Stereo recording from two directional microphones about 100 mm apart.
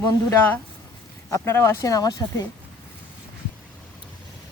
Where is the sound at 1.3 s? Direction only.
25° left (ahead or behind).